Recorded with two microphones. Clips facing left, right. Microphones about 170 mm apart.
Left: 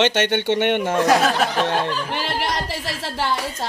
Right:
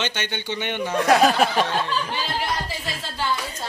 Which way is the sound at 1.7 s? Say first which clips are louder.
Left 3 dB; 65° left (ahead or behind).